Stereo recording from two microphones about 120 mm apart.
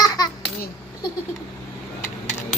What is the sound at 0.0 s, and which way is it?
Babbling, 30° left (ahead or behind).